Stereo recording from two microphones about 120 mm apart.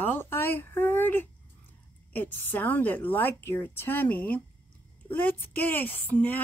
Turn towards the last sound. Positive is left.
turn(degrees=15)  # may be behind; listen again after turning